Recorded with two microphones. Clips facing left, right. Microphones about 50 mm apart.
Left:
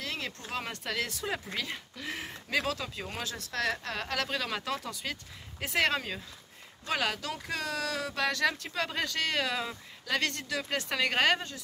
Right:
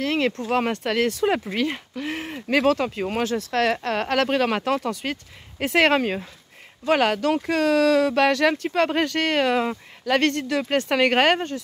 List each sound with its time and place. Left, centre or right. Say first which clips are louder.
0.0 s speech: right 14 dB; right
0.5 s speech: right 13 dB; right
2.3 s speech: right 13 dB; right
3.5 s speech: right 9 dB; right
6.9 s speech: right 12 dB; right
8.7 s speech: right 11 dB; right